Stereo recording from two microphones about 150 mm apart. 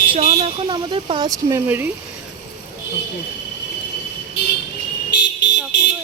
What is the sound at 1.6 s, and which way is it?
Speech, 15° right (ahead or behind).